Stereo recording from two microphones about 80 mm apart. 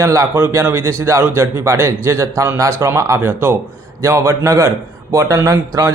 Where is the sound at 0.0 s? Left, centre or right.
Right.